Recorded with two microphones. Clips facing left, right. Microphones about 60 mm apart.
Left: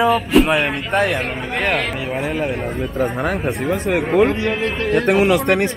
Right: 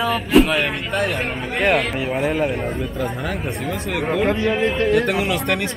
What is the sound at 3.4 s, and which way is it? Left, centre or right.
Speech, left.